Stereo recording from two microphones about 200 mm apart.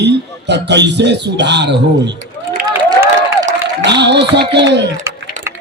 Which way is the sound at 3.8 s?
60° right (ahead or behind).